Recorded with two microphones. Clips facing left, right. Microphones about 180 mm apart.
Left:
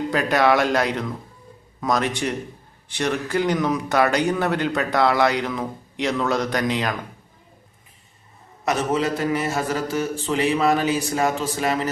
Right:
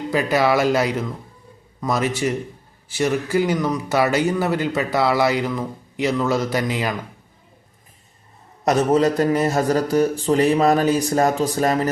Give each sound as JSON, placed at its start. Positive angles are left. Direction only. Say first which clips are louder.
{"t": 0.1, "sound": "a man's voice", "louder": "right 1 dB", "side_deg": 0}
{"t": 8.6, "sound": "a man's voice", "louder": "right 5 dB", "side_deg": -40}